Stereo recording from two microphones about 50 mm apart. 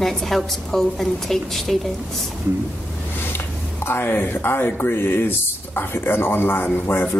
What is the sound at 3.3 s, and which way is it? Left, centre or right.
Speech, left.